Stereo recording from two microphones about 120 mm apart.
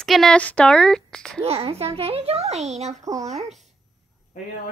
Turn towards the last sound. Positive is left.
turn(degrees=-30)  # may be behind; listen again after turning